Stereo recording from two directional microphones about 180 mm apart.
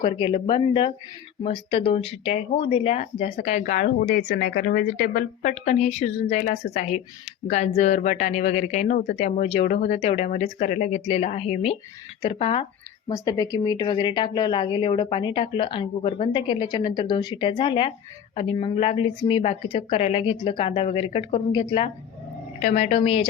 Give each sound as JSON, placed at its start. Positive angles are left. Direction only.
{"t": 0.0, "sound": "speech", "side_deg": 30}
{"t": 13.1, "sound": "a woman's voice", "side_deg": 20}
{"t": 22.6, "sound": "speech", "side_deg": 40}